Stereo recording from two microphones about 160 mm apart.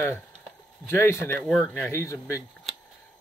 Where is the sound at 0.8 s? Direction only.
15° left (ahead or behind).